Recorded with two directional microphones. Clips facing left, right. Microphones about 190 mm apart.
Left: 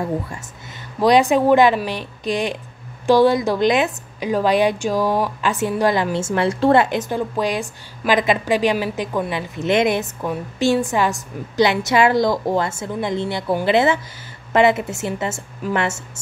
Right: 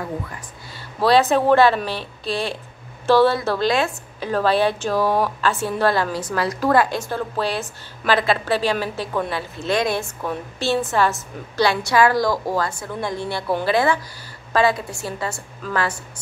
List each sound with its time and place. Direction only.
1.0 s a woman's voice: 15° left (ahead or behind)